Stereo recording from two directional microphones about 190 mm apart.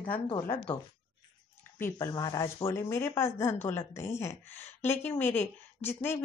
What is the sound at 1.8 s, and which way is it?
A woman's voice, 15° left (ahead or behind).